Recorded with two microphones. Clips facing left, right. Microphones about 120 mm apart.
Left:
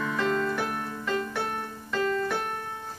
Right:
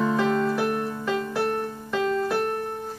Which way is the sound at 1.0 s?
5° right (ahead or behind).